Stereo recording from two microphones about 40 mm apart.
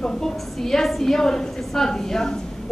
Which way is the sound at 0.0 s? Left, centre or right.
Centre.